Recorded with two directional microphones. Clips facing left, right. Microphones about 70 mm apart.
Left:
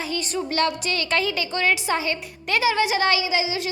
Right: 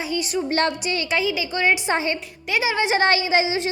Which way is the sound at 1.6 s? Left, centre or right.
Right.